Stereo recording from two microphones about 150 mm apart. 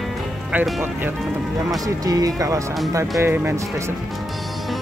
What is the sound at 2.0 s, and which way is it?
Speech, 25° right (ahead or behind).